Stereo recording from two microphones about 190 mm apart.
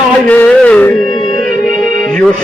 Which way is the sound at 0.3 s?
5° left (ahead or behind).